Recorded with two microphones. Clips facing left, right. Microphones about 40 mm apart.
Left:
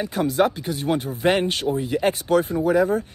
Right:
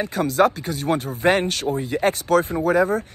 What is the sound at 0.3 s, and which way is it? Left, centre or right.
Speech, left.